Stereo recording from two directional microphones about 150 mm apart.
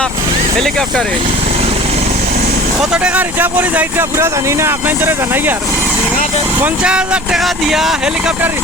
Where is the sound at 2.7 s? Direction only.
5° right (ahead or behind).